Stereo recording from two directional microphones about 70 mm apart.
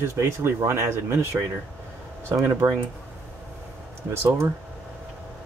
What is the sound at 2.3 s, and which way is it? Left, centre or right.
Speech, right.